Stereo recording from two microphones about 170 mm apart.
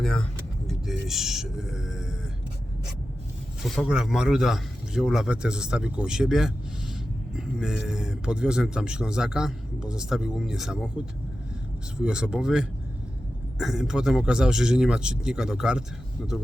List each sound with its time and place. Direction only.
0.0 s speech: 5° left (ahead or behind)
3.6 s speech: 5° right (ahead or behind)
11.9 s speech: 5° right (ahead or behind)